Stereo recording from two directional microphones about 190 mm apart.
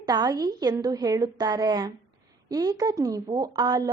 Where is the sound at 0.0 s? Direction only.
20° right (ahead or behind).